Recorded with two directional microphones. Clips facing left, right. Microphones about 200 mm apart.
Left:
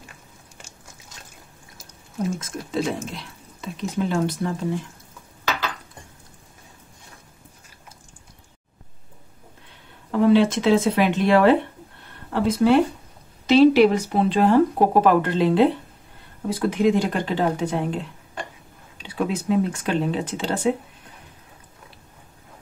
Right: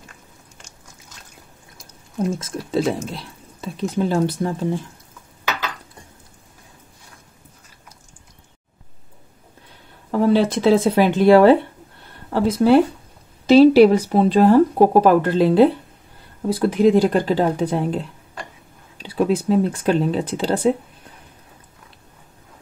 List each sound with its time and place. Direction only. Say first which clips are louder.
2.3 s speech: right 4 dB; 30° right (ahead or behind)
10.1 s speech: even; 40° right (ahead or behind)